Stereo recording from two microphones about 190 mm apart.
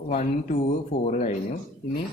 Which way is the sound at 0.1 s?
40° left (ahead or behind).